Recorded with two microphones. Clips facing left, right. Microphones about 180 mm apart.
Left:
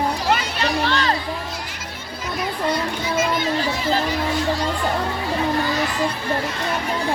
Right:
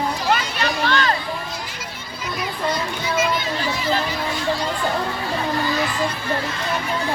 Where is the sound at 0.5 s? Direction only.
30° left (ahead or behind).